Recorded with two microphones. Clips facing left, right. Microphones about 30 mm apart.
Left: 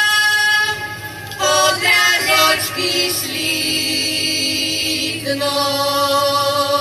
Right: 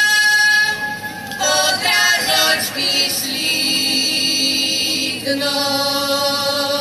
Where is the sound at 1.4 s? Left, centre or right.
Left.